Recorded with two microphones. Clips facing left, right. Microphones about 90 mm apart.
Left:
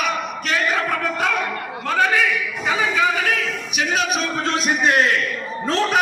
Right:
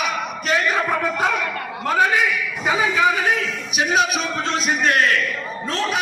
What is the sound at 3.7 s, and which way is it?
Music, 20° right (ahead or behind).